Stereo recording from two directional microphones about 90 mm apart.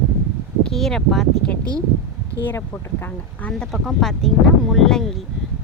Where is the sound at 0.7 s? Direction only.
5° left (ahead or behind).